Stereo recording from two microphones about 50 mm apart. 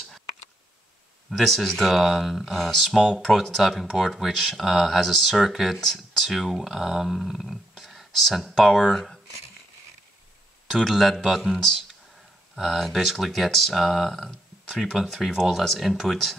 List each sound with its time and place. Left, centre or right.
1.3 s speech: centre
2.8 s speech: centre
10.8 s speech: centre